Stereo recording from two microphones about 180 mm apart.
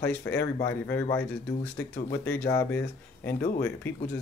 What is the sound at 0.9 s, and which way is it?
Speech, 10° left (ahead or behind).